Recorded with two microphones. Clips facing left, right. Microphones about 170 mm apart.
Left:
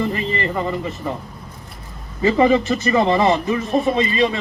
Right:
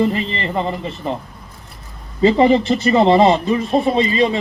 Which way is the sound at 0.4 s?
25° right (ahead or behind).